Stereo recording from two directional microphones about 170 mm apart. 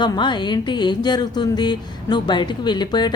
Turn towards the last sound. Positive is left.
turn(degrees=25)  # may be behind; listen again after turning